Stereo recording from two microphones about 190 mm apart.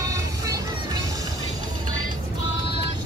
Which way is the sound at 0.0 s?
15° right (ahead or behind).